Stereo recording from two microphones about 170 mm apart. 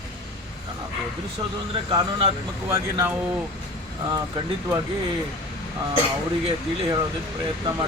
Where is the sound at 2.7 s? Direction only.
15° right (ahead or behind).